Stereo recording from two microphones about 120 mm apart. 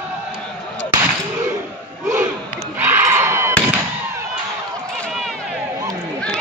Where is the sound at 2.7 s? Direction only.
20° right (ahead or behind).